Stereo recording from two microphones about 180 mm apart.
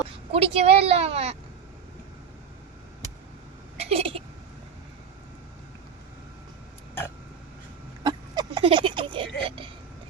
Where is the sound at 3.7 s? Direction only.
35° right (ahead or behind).